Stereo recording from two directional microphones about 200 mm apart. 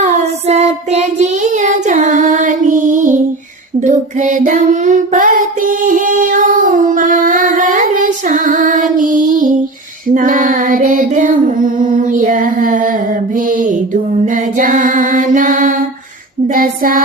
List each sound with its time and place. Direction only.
0.0 s child singing: 35° right (ahead or behind)
10.2 s female singing: 40° right (ahead or behind)